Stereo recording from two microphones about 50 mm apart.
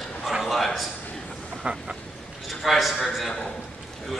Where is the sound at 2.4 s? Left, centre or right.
Centre.